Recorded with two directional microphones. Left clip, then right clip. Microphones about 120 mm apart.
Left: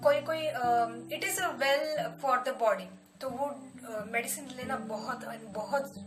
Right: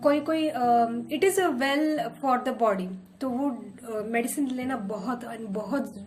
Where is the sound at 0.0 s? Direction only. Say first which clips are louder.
Right 3 dB; 30° left (ahead or behind).